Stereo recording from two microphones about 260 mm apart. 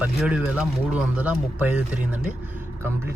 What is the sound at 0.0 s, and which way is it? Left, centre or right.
Speech, centre.